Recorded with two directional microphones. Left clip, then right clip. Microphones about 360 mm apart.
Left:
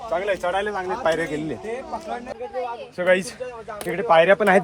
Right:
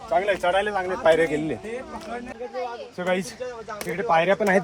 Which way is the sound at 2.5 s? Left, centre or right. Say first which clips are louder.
Left 2 dB; left.